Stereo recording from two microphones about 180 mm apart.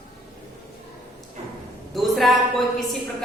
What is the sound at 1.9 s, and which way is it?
A woman's voice, centre (ahead or behind).